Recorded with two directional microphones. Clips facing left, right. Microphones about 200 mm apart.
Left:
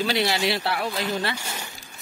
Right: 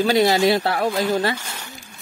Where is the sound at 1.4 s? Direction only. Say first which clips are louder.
Left 1 dB; 10° left (ahead or behind).